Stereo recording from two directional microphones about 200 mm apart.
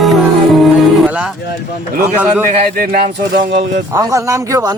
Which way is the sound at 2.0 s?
10° right (ahead or behind).